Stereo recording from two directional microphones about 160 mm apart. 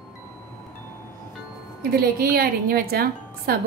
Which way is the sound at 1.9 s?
70° right (ahead or behind).